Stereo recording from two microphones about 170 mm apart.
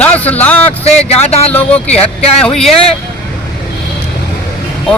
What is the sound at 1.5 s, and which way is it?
Speech, 10° left (ahead or behind).